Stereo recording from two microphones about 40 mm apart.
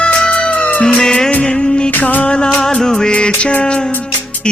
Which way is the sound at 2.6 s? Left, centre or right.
Centre.